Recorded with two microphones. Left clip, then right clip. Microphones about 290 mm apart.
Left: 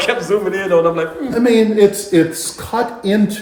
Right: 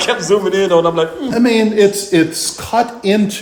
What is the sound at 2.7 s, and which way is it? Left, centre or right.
Speech, centre.